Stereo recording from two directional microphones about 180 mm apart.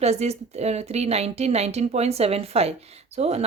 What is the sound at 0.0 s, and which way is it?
Speech, 35° right (ahead or behind).